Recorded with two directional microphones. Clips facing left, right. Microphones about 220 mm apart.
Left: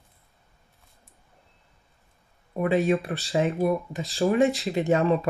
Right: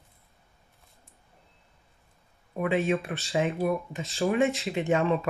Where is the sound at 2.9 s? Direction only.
35° left (ahead or behind).